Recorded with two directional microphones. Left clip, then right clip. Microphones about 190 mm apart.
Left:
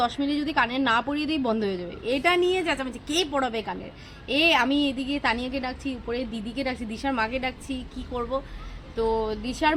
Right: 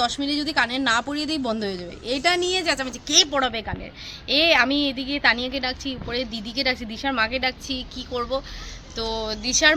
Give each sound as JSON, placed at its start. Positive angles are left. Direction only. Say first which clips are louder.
{"t": 0.0, "sound": "a woman's voice", "louder": "right 2 dB", "side_deg": -15}